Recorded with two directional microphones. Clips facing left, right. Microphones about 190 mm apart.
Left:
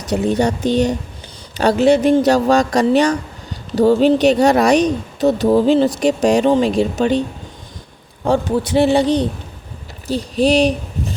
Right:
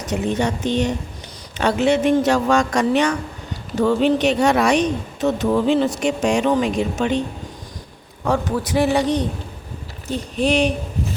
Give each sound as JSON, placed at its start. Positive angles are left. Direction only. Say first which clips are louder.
{"t": 0.1, "sound": "speech", "louder": "left 5 dB", "side_deg": 40}
{"t": 8.2, "sound": "a man's voice", "louder": "left 4 dB", "side_deg": 30}